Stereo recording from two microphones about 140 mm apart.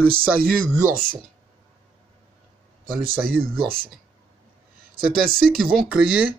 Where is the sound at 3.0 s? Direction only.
90° right.